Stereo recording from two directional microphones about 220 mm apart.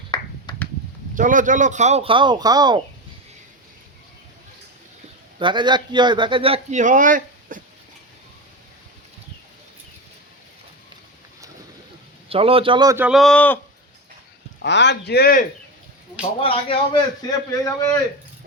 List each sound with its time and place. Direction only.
0.1 s a sound: 20° left (ahead or behind)
1.1 s a man's voice: 35° right (ahead or behind); by 2.8 s 20° right (ahead or behind)
5.4 s a man's voice: 20° right (ahead or behind); by 7.6 s 35° right (ahead or behind)
12.3 s a man's voice: 25° right (ahead or behind)
13.1 s a man's voice: centre (ahead or behind)
14.6 s a man's voice: 50° left (ahead or behind)
16.4 s a man's voice: 25° left (ahead or behind)